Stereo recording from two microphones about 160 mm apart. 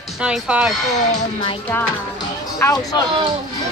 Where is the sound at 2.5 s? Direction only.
20° left (ahead or behind).